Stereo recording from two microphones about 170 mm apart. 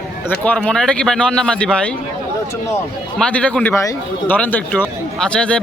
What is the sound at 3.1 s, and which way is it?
Speech, 5° left (ahead or behind).